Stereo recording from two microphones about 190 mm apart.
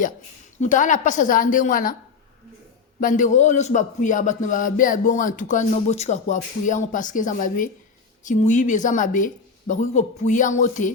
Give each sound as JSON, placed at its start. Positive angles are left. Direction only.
{"t": 0.6, "sound": "a man's voice", "side_deg": 40}
{"t": 3.0, "sound": "a man's voice", "side_deg": 45}